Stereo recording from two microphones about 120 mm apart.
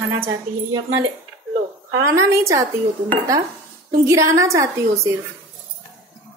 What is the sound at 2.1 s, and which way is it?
Speech, 25° right (ahead or behind).